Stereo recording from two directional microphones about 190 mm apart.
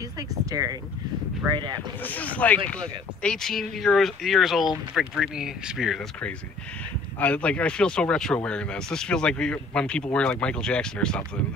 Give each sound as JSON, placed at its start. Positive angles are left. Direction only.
{"t": 0.3, "sound": "speech", "side_deg": -20}
{"t": 2.0, "sound": "speech", "side_deg": 10}